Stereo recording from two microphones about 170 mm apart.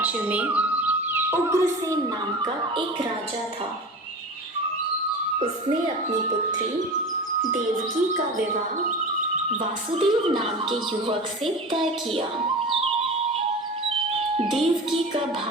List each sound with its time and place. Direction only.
0.0 s a woman's voice: 10° right (ahead or behind)
2.4 s speech: 30° right (ahead or behind)
9.9 s speech: 30° right (ahead or behind)
14.3 s speech: 35° right (ahead or behind)